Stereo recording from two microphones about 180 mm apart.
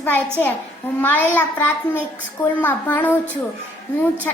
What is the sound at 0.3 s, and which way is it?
A woman's voice, 10° left (ahead or behind).